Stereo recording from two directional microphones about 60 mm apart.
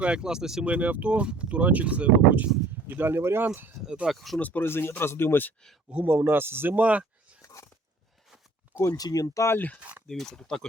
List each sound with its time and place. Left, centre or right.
0.0 s speech: centre
0.6 s speech: right
2.8 s speech: right
4.1 s speech: centre
4.4 s speech: left
4.6 s speech: left
5.9 s speech: right
6.7 s speech: right
9.0 s speech: left
10.1 s speech: centre